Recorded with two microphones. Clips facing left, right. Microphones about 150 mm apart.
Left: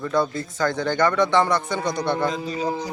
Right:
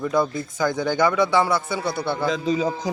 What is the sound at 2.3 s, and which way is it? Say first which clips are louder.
Speech: right 3 dB; 90° right.